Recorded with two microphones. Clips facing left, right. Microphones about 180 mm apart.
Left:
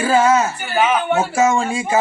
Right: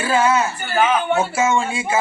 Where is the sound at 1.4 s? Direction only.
40° left (ahead or behind).